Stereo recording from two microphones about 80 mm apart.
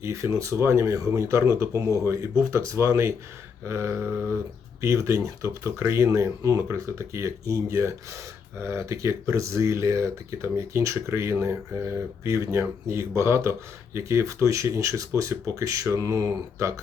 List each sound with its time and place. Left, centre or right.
0.0 s speech: right